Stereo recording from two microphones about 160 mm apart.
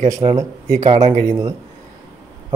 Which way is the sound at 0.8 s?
45° right (ahead or behind).